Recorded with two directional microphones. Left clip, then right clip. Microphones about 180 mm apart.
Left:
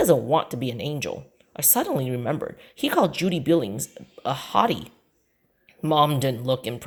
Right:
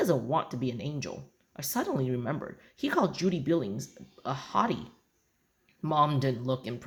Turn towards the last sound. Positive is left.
turn(degrees=30)  # may be behind; listen again after turning